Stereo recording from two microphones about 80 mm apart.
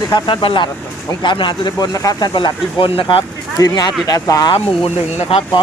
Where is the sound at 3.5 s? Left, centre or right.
Left.